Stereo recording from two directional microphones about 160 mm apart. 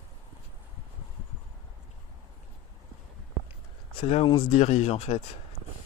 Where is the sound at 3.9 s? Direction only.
35° left (ahead or behind).